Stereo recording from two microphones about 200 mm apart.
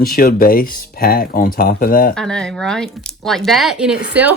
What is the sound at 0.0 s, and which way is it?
Speech, 45° left (ahead or behind).